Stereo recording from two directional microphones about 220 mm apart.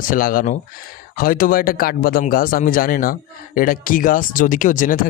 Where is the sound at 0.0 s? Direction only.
40° left (ahead or behind).